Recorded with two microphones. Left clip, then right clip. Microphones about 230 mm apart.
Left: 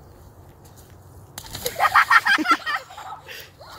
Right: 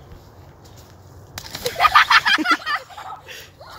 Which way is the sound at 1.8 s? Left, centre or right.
Right.